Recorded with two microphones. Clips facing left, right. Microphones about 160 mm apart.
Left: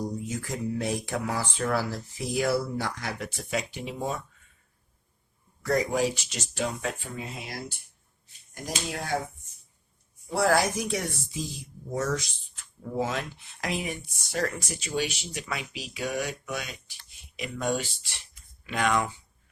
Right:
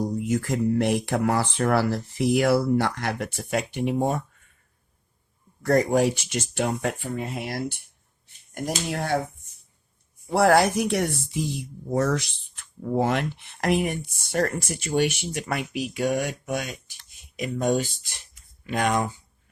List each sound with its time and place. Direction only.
0.2 s speech: 65° right (ahead or behind)
5.6 s speech: 55° right (ahead or behind)
10.2 s speech: 65° right (ahead or behind); by 19.1 s 45° right (ahead or behind)